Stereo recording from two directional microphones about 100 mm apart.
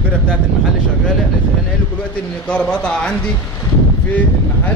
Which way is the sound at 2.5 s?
10° left (ahead or behind).